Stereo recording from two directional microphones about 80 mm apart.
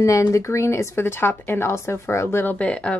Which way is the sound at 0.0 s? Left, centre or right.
Left.